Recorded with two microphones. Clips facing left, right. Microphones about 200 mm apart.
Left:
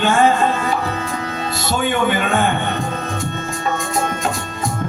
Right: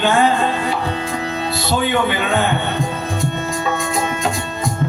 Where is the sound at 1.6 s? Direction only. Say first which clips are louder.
Even; 45° left (ahead or behind).